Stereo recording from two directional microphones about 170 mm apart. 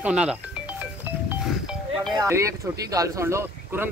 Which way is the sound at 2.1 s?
20° right (ahead or behind).